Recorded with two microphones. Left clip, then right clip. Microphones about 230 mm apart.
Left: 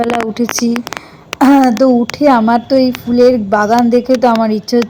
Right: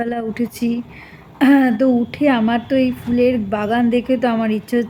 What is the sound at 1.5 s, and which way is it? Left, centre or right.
Speech, centre.